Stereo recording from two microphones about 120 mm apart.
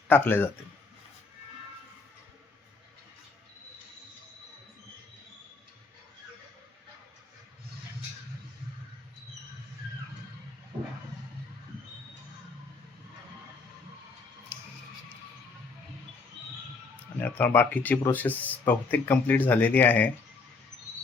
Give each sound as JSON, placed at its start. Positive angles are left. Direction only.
{"t": 0.1, "sound": "speech", "side_deg": 15}
{"t": 17.2, "sound": "speech", "side_deg": 15}